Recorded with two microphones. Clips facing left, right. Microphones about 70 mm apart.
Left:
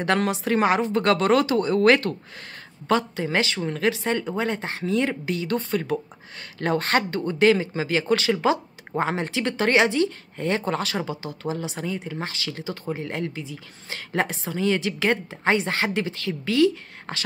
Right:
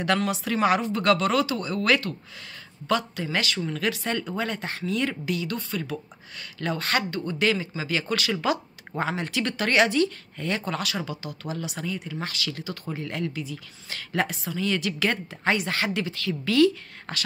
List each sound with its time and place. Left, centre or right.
0.3 s speech: left